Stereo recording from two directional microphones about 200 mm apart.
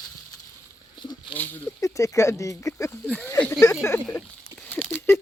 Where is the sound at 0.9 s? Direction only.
20° left (ahead or behind).